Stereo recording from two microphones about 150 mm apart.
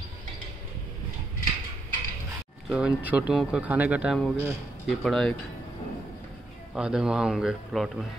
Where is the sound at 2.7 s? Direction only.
10° right (ahead or behind).